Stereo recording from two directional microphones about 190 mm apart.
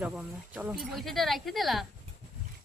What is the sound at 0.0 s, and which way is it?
Speech, 5° right (ahead or behind).